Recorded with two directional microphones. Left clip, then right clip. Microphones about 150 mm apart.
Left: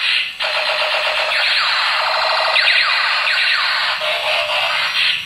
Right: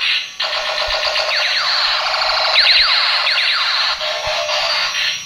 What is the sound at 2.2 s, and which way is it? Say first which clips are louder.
Siren: right 3 dB; 35° right (ahead or behind).